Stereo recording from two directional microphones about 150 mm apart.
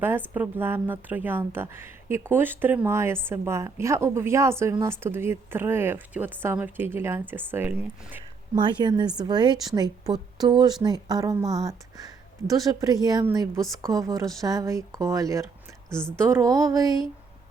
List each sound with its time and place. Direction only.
0.3 s speech: 15° right (ahead or behind)
8.5 s a woman's voice: 30° right (ahead or behind)
15.9 s a woman's voice: 5° left (ahead or behind)
16.1 s a woman's voice: 20° right (ahead or behind)